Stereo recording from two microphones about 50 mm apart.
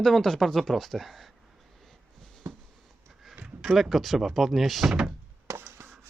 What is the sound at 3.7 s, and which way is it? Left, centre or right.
Speech, centre.